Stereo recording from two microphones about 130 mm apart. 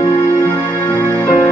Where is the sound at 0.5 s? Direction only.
15° left (ahead or behind).